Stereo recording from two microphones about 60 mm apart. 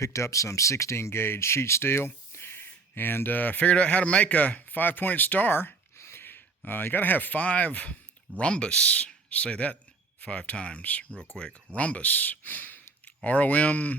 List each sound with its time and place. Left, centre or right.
0.0 s speech: left